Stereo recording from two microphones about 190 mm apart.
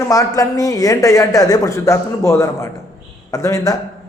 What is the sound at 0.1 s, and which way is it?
A man's voice, 15° left (ahead or behind).